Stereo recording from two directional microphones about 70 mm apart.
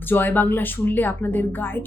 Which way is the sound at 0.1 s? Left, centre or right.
Left.